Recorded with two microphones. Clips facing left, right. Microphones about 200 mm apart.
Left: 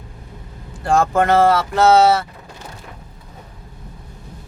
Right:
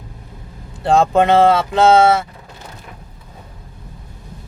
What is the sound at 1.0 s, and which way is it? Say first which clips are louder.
Speech: right 2 dB; 20° right (ahead or behind).